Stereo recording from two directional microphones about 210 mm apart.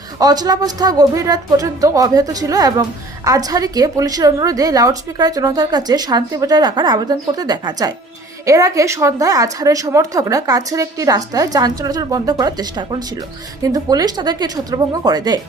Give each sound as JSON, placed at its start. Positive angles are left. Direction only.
{"t": 0.2, "sound": "a woman's voice", "side_deg": -20}